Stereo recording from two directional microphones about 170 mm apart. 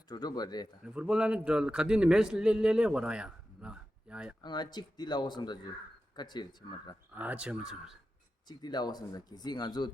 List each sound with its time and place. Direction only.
0.1 s speech: 25° left (ahead or behind)
0.9 s a man's voice: 5° right (ahead or behind)
4.4 s speech: 25° left (ahead or behind)
7.2 s speech: 10° right (ahead or behind)
8.4 s speech: 25° left (ahead or behind)